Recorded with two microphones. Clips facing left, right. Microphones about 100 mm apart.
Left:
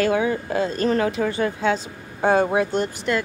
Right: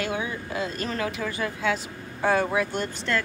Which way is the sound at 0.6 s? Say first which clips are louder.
Left 9 dB; 35° left (ahead or behind).